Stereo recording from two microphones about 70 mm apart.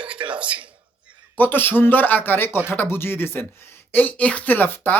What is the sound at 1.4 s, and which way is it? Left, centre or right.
Speech, left.